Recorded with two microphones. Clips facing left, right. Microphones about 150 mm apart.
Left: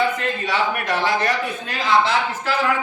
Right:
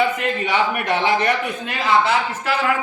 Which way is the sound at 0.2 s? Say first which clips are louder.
Right 2 dB; 20° right (ahead or behind).